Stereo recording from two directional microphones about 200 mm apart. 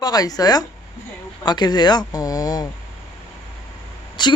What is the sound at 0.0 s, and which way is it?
Speech, 20° left (ahead or behind).